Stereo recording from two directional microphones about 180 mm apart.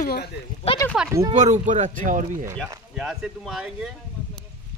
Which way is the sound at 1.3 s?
45° right (ahead or behind).